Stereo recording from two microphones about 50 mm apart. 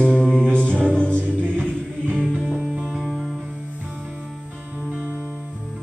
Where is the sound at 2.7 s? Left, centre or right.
Centre.